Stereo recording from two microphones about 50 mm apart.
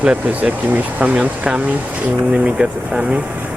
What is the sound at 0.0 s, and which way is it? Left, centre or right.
Speech, right.